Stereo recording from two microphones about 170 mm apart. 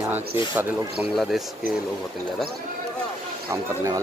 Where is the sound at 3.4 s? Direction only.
20° right (ahead or behind).